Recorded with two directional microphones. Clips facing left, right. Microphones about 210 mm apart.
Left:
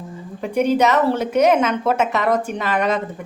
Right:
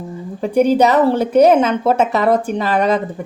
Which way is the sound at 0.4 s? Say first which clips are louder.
Right 4 dB; 35° right (ahead or behind).